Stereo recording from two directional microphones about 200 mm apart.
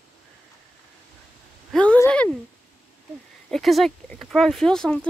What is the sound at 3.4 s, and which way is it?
Speech, centre (ahead or behind).